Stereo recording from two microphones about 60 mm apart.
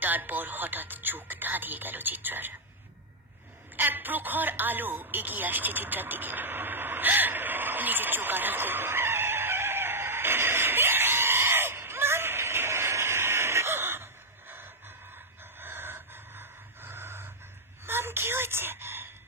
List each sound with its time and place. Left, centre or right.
0.0 s speech: right
3.7 s radio: right
15.6 s a sound: right